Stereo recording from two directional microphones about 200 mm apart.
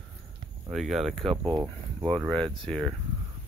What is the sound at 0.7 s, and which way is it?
Speech, centre (ahead or behind).